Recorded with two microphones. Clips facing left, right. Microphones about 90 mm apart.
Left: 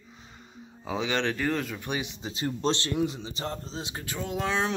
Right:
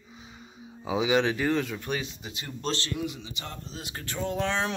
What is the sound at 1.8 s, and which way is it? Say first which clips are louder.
Speech: even; 15° left (ahead or behind).